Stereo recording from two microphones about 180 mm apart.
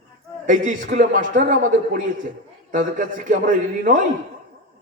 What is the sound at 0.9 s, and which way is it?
Mantra, 45° right (ahead or behind).